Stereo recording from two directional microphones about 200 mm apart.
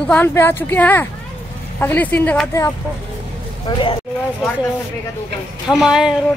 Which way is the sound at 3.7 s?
20° left (ahead or behind).